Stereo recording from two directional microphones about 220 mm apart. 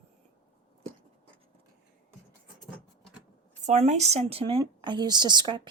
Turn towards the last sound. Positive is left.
turn(degrees=-20)  # may be behind; listen again after turning